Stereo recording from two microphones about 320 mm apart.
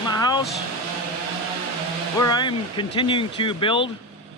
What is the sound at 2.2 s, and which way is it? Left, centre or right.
Speech, centre.